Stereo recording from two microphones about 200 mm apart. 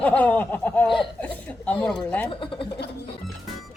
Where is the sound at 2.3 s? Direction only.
25° left (ahead or behind).